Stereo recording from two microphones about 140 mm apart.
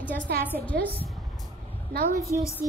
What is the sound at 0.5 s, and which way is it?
Speech, 90° right.